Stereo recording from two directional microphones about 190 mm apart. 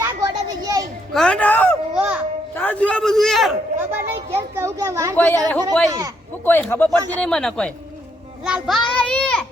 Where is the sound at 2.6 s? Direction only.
10° left (ahead or behind).